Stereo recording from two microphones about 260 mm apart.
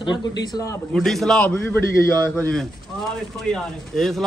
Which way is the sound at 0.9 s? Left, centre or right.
Centre.